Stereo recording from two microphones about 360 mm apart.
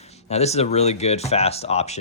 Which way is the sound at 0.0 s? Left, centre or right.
Centre.